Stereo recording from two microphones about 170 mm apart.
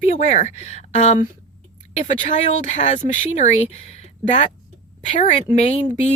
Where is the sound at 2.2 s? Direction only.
45° left (ahead or behind).